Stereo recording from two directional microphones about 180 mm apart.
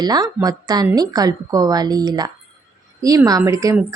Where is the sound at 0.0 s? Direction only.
20° right (ahead or behind).